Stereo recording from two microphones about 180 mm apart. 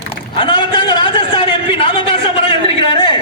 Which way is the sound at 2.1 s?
30° left (ahead or behind).